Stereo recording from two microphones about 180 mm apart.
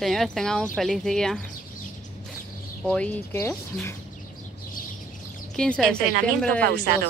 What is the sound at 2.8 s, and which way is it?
Speech, 5° left (ahead or behind).